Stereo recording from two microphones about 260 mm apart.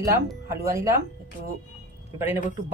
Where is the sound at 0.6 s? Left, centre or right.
Centre.